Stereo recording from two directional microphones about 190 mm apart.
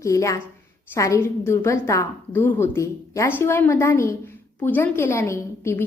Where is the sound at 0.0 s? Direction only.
15° left (ahead or behind).